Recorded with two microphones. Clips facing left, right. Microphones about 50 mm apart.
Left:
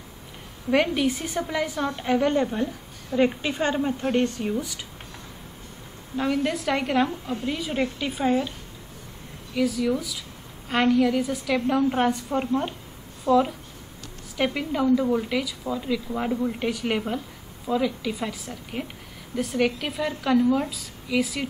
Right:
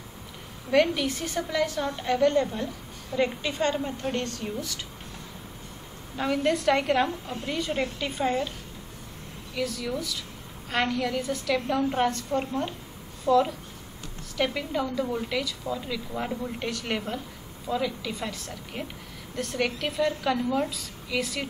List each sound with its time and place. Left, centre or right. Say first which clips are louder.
0.7 s a woman's voice: left 1 dB; centre
6.1 s a woman's voice: left 1 dB; centre
9.6 s a woman's voice: left 6 dB; centre